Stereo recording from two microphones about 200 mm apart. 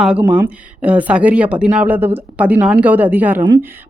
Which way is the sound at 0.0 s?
5° right (ahead or behind).